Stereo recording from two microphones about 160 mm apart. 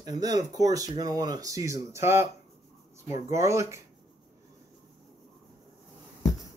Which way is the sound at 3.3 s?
20° right (ahead or behind).